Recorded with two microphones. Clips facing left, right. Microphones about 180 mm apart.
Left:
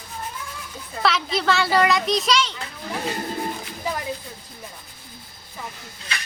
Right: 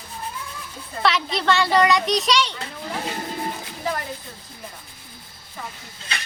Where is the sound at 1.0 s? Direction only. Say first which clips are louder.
Even; centre (ahead or behind).